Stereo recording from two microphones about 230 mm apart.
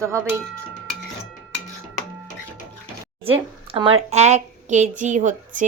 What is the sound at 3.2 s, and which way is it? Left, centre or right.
A woman's voice, right.